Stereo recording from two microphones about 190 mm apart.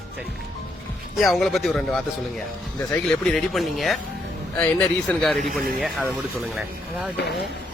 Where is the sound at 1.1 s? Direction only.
Centre (ahead or behind).